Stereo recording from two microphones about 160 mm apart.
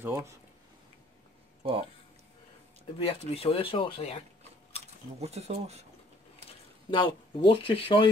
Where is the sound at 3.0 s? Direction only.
40° left (ahead or behind).